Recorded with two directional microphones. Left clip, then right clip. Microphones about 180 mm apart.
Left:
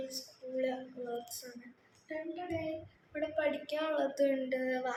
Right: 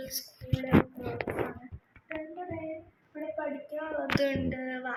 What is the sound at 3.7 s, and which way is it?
Speech, 10° left (ahead or behind).